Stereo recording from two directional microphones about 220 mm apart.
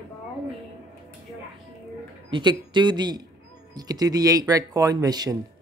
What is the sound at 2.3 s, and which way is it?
Speech, 20° right (ahead or behind).